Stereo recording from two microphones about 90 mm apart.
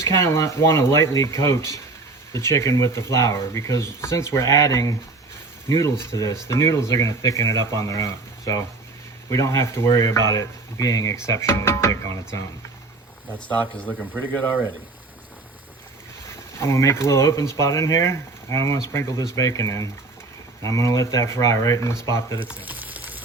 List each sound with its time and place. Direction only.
0.0 s speech: 30° left (ahead or behind)
13.5 s speech: 15° left (ahead or behind)
16.3 s speech: 30° left (ahead or behind)
22.4 s frying: 20° right (ahead or behind)